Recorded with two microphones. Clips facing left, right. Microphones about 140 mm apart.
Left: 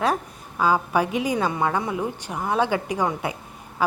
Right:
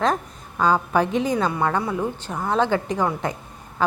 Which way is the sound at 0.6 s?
10° left (ahead or behind).